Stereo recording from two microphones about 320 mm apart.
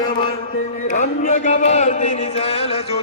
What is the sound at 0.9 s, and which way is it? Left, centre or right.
Speech, left.